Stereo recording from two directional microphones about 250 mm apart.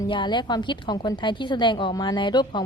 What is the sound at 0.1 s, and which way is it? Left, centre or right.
A woman's voice, centre.